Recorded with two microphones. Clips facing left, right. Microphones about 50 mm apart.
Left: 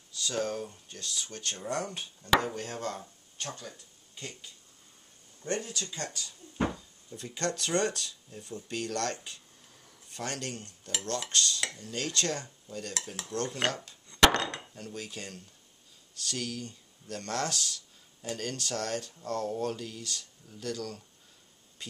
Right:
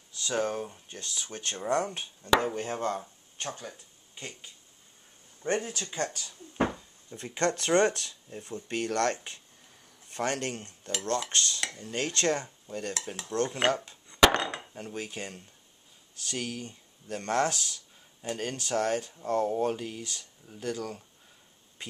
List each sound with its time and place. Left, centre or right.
0.1 s speech: right
1.9 s speech: centre
14.0 s chop: centre
14.3 s a sound: centre
14.8 s speech: right